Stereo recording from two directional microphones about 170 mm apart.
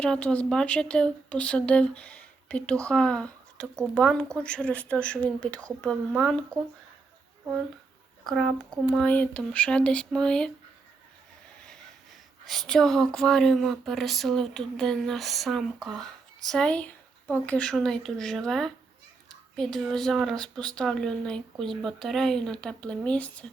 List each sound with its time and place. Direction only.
0.0 s speech: 5° left (ahead or behind)
8.3 s speech: centre (ahead or behind)
12.5 s speech: centre (ahead or behind)